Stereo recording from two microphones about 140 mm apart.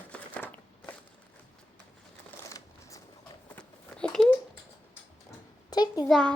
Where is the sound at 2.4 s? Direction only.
20° left (ahead or behind).